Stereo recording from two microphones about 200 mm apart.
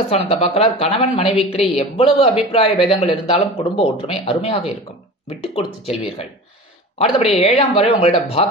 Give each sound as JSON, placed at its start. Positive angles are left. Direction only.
{"t": 0.1, "sound": "a man's voice", "side_deg": 30}